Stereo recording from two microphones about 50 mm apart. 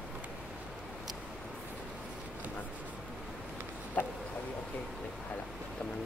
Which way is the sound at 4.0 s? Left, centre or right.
Left.